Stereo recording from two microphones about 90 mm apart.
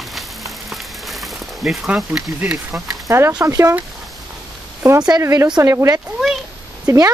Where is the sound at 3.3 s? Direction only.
40° right (ahead or behind).